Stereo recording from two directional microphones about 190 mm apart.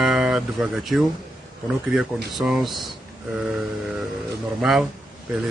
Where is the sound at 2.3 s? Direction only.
Centre (ahead or behind).